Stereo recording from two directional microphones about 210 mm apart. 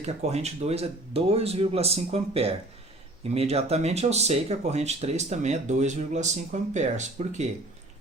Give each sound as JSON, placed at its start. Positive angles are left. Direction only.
{"t": 0.0, "sound": "speech", "side_deg": -30}